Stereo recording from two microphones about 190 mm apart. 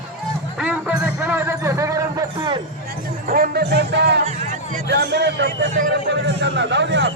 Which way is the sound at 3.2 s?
45° right (ahead or behind).